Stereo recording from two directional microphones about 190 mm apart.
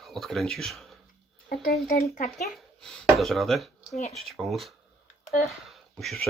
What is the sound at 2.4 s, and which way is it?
A child's voice, centre (ahead or behind).